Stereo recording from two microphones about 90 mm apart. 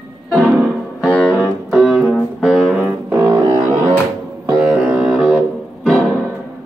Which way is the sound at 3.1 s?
25° right (ahead or behind).